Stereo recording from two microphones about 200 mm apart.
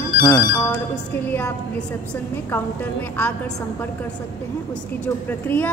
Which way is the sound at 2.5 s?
10° left (ahead or behind).